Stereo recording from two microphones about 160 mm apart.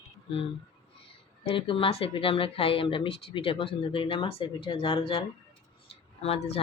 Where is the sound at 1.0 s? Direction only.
35° left (ahead or behind).